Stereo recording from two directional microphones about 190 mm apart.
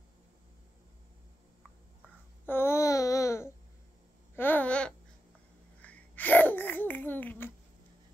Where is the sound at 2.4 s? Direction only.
10° left (ahead or behind).